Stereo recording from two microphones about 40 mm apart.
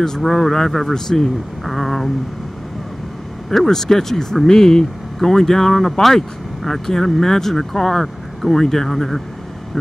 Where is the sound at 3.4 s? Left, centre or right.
Centre.